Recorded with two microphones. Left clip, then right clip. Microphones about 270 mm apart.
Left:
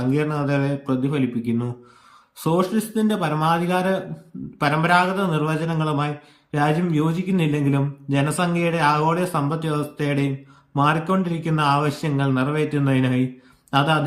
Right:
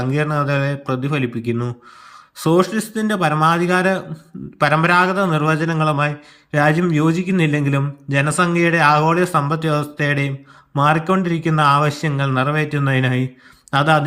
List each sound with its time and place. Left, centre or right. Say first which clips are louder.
0.0 s a man's voice: right 3 dB; centre